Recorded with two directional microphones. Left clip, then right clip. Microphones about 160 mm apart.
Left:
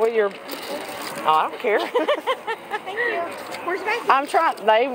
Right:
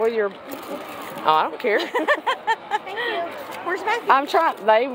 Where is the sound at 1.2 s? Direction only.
50° right (ahead or behind).